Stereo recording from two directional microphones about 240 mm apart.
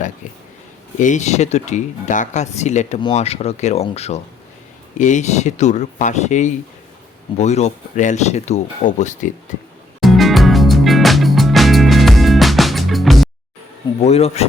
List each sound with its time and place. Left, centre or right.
0.9 s speech: left
10.0 s music: centre
14.0 s speech: left